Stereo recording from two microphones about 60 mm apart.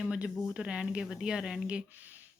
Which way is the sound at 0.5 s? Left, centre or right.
Centre.